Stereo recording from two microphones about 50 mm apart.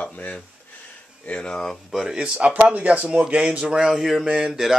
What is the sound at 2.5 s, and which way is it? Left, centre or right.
Speech, right.